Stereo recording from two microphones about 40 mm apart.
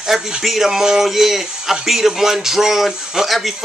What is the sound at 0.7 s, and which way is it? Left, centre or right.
Speech, centre.